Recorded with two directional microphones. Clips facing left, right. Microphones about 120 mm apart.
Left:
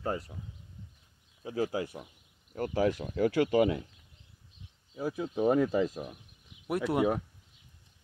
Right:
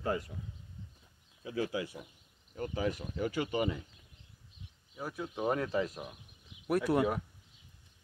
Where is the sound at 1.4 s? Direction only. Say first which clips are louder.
Left 3 dB; 35° left (ahead or behind).